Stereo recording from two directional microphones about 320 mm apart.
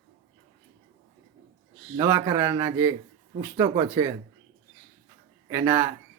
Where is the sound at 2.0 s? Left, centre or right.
Centre.